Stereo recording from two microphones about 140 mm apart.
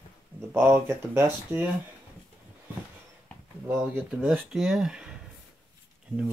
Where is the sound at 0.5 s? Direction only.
15° right (ahead or behind).